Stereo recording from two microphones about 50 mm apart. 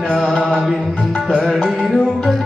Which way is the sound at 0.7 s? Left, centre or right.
Centre.